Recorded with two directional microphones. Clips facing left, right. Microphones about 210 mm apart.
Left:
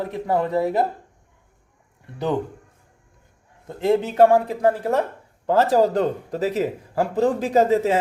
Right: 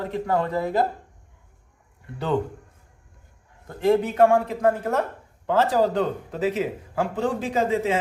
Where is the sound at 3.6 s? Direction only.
25° left (ahead or behind).